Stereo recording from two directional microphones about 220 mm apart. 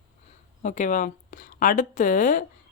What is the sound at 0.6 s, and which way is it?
Speech, 35° left (ahead or behind).